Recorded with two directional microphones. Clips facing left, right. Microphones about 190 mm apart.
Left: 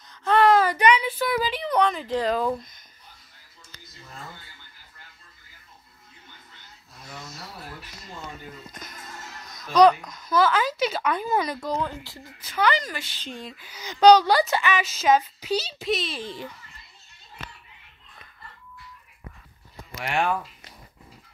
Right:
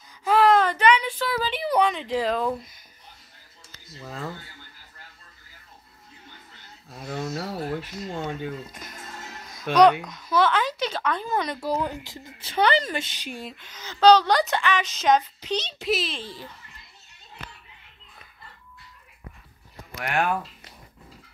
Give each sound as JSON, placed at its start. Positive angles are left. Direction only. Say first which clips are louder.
{"t": 0.1, "sound": "a sound", "louder": "even", "side_deg": -5}
{"t": 1.5, "sound": "a sound", "louder": "right 1 dB", "side_deg": -5}
{"t": 2.0, "sound": "speech", "louder": "even", "side_deg": 0}
{"t": 4.0, "sound": "speech", "louder": "right 8 dB", "side_deg": -85}
{"t": 6.9, "sound": "speech", "louder": "right 12 dB", "side_deg": -70}
{"t": 9.7, "sound": "speech", "louder": "even", "side_deg": -75}
{"t": 10.0, "sound": "speech", "louder": "even", "side_deg": 0}
{"t": 11.6, "sound": "speech", "louder": "right 2 dB", "side_deg": -10}
{"t": 12.4, "sound": "speech", "louder": "right 2 dB", "side_deg": -30}
{"t": 13.6, "sound": "a woman's voice", "louder": "left 2 dB", "side_deg": 10}
{"t": 16.2, "sound": "a woman's voice", "louder": "left 4 dB", "side_deg": 20}
{"t": 20.0, "sound": "speech", "louder": "even", "side_deg": 0}